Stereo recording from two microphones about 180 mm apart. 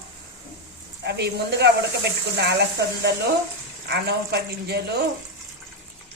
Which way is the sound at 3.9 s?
65° right (ahead or behind).